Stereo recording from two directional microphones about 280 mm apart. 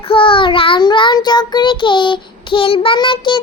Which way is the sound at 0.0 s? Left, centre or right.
Centre.